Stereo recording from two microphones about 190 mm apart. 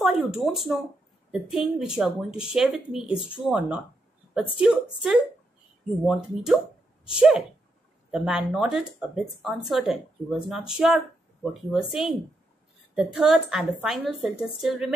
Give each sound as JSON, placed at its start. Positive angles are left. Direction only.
{"t": 0.0, "sound": "speech", "side_deg": 0}
{"t": 3.1, "sound": "speech", "side_deg": 25}
{"t": 3.4, "sound": "speech", "side_deg": -5}